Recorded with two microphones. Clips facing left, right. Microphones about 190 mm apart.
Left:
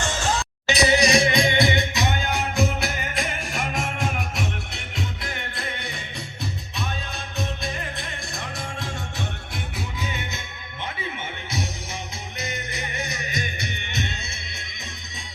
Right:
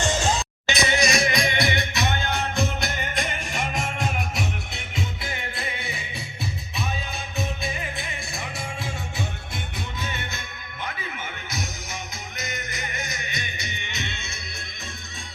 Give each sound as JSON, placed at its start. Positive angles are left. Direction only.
{"t": 0.0, "sound": "music", "side_deg": -15}
{"t": 0.7, "sound": "music", "side_deg": 35}
{"t": 1.5, "sound": "music", "side_deg": 20}
{"t": 2.6, "sound": "music", "side_deg": 0}
{"t": 10.0, "sound": "music", "side_deg": 15}
{"t": 12.4, "sound": "music", "side_deg": 30}